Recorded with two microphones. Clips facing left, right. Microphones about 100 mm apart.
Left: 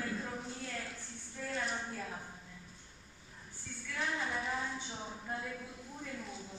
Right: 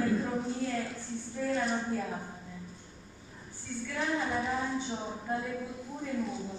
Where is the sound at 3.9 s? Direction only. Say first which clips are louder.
Right 5 dB; 25° right (ahead or behind).